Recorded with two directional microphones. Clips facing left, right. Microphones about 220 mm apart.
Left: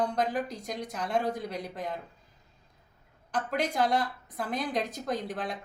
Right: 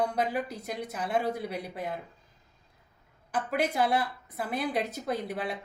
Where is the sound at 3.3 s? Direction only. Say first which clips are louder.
Right 1 dB; 10° right (ahead or behind).